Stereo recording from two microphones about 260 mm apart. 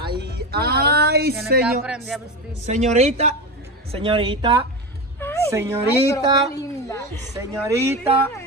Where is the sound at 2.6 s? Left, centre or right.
Right.